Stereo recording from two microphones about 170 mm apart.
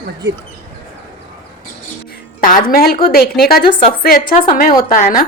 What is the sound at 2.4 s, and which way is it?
A woman's voice, 55° left (ahead or behind).